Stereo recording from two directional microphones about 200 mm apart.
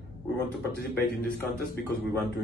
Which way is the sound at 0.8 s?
50° left (ahead or behind).